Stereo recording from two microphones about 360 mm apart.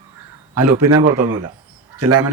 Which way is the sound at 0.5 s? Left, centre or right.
Right.